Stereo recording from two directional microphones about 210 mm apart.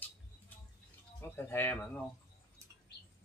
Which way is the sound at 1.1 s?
10° left (ahead or behind).